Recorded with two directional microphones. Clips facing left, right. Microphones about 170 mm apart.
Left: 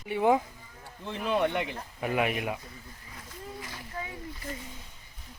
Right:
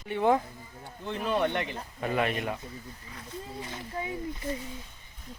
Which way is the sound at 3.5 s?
25° right (ahead or behind).